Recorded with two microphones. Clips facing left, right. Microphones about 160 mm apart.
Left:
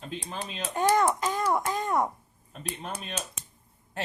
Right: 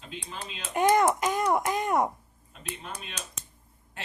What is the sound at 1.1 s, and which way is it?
Speech, 15° right (ahead or behind).